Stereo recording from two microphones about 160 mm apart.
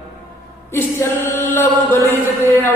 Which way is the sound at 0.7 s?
15° left (ahead or behind).